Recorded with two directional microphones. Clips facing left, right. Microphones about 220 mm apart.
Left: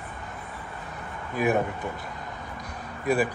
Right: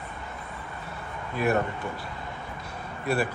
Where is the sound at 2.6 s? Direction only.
15° left (ahead or behind).